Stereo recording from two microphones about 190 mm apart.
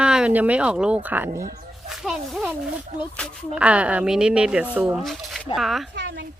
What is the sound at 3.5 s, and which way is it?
A woman's voice, 5° right (ahead or behind).